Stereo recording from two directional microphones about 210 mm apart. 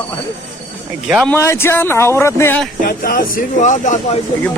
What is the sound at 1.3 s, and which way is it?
Speech, 10° left (ahead or behind).